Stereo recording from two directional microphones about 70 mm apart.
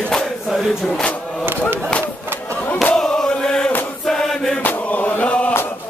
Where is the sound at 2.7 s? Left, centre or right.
Centre.